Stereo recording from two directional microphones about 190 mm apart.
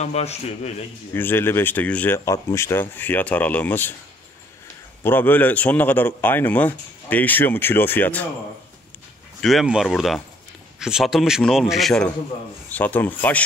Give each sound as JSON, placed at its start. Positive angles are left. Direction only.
{"t": 0.0, "sound": "a man's voice", "side_deg": 35}
{"t": 1.1, "sound": "speech", "side_deg": 10}
{"t": 5.0, "sound": "speech", "side_deg": 10}
{"t": 9.4, "sound": "a man's voice", "side_deg": 0}